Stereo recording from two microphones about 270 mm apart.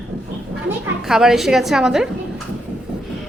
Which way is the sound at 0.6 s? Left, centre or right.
Centre.